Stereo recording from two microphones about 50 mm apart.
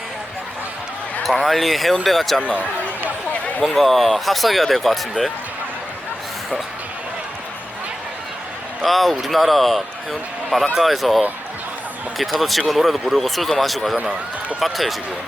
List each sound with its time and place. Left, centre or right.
1.2 s a man's voice: centre
2.4 s basketball bounce: right
3.6 s a man's voice: centre
8.8 s a man's voice: centre
13.9 s a man's voice: centre
14.6 s a man's voice: centre